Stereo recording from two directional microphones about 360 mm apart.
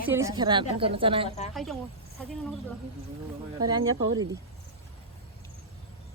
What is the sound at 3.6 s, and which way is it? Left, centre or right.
Speech, centre.